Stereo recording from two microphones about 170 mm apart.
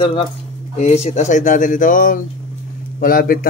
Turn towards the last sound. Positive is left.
turn(degrees=60)  # may be behind; listen again after turning